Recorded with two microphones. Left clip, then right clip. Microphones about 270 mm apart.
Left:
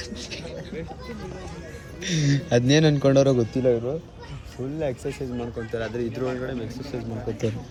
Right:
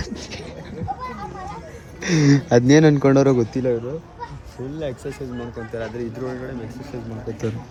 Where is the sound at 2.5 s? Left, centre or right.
Centre.